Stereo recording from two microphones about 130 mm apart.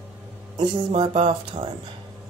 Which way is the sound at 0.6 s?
40° right (ahead or behind).